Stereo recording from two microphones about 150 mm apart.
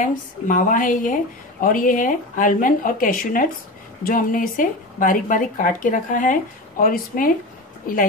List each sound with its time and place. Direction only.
0.0 s a woman's voice: 60° left (ahead or behind)